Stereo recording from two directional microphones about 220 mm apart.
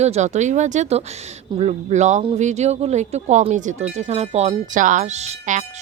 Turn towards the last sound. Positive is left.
turn(degrees=-30)  # may be behind; listen again after turning